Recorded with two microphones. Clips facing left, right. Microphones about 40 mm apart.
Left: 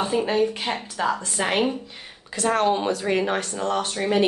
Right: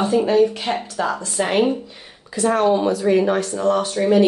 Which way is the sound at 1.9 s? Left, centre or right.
Left.